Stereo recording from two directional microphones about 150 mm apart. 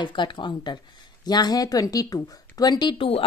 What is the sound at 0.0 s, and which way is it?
Speech, 30° left (ahead or behind).